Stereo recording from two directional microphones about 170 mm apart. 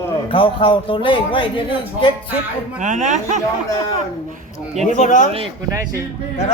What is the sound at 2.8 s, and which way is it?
Speech, 50° right (ahead or behind).